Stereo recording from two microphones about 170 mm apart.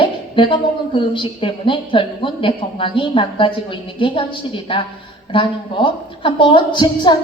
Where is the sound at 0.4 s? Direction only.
30° left (ahead or behind).